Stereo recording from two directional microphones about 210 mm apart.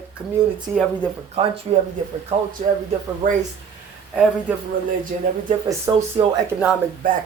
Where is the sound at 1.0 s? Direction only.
25° right (ahead or behind).